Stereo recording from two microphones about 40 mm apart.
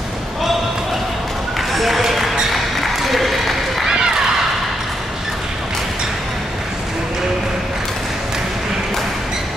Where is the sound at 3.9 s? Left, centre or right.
Centre.